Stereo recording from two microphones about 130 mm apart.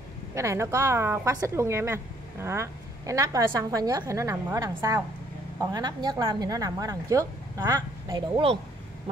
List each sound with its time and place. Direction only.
0.3 s a woman's voice: 20° right (ahead or behind)